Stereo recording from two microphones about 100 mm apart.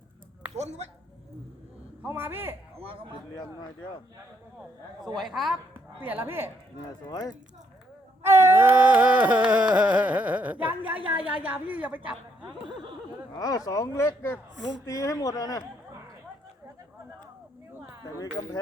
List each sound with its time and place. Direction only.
0.5 s speech: 90° right
2.0 s a man's voice: 20° right (ahead or behind)
2.7 s a man's voice: 70° right (ahead or behind)
5.1 s a woman's voice: centre (ahead or behind)
6.0 s a man's voice: 20° right (ahead or behind)
7.1 s speech: 45° left (ahead or behind)
8.2 s a sound: 25° right (ahead or behind)
13.3 s speech: 35° left (ahead or behind)
18.2 s speech: 40° left (ahead or behind)